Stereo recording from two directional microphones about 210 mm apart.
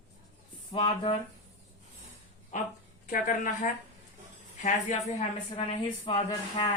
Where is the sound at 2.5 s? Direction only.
35° left (ahead or behind).